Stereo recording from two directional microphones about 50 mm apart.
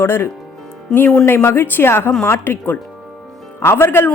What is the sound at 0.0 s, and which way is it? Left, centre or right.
Speech, left.